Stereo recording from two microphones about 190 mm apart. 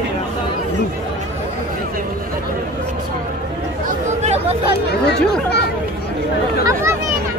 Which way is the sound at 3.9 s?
35° right (ahead or behind).